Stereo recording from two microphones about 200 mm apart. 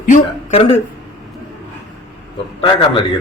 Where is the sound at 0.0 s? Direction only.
40° left (ahead or behind).